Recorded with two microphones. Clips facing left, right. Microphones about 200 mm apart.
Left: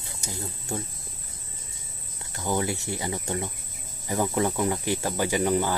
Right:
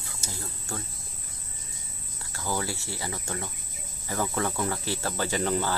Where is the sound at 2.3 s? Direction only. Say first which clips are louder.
Left 4 dB; 20° left (ahead or behind).